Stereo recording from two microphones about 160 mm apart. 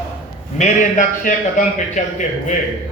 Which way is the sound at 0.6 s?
50° left (ahead or behind).